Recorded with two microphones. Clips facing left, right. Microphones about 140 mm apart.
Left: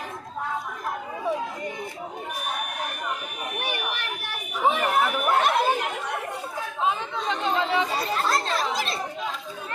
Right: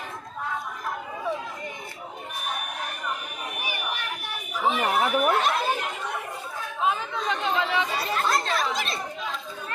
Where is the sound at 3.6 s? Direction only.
70° left (ahead or behind).